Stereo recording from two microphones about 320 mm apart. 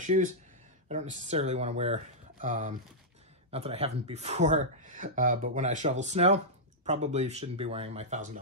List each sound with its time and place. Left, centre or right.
0.0 s speech: right